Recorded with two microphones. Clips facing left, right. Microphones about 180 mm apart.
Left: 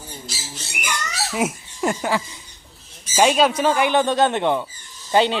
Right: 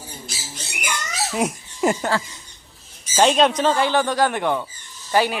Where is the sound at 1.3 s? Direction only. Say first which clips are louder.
Even; 5° left (ahead or behind).